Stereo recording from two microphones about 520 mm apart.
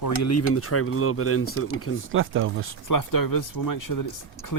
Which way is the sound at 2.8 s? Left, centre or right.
Left.